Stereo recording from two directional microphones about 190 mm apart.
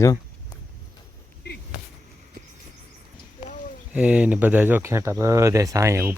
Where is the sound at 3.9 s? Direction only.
5° right (ahead or behind).